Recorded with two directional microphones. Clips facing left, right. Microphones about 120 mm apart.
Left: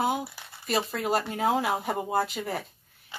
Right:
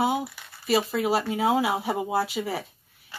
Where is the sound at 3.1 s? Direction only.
20° left (ahead or behind).